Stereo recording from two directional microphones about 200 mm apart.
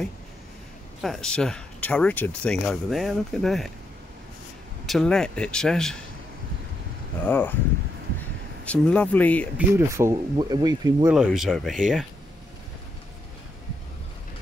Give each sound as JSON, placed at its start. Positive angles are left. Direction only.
{"t": 1.0, "sound": "speech", "side_deg": 0}
{"t": 4.8, "sound": "speech", "side_deg": 0}
{"t": 7.2, "sound": "speech", "side_deg": 10}
{"t": 8.6, "sound": "speech", "side_deg": 5}
{"t": 9.6, "sound": "speech", "side_deg": -10}
{"t": 11.1, "sound": "speech", "side_deg": 0}